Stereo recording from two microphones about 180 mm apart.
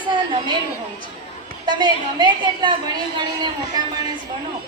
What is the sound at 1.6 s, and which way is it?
A woman's voice, 25° right (ahead or behind).